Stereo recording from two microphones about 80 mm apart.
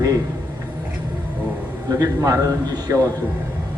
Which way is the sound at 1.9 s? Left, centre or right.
Right.